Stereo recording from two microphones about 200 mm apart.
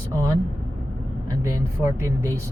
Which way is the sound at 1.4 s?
15° right (ahead or behind).